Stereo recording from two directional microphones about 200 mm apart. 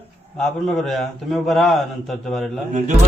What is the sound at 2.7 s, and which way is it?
Speech, 35° right (ahead or behind).